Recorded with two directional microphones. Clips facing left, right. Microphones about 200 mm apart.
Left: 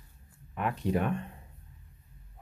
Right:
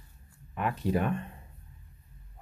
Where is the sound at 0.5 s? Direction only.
Centre (ahead or behind).